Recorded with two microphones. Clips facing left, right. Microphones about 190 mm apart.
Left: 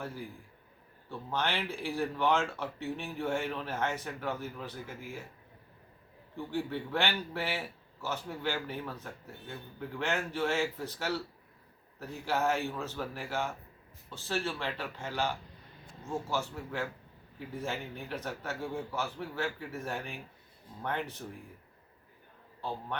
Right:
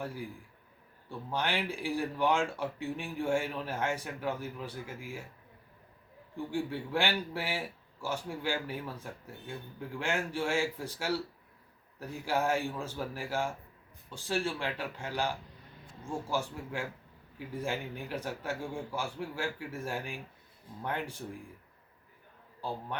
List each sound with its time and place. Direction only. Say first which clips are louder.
1.3 s speech: right 1 dB; 10° right (ahead or behind)
6.3 s speech: even; 10° right (ahead or behind)